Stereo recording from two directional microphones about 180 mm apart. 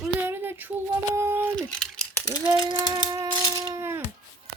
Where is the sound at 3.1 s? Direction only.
20° right (ahead or behind).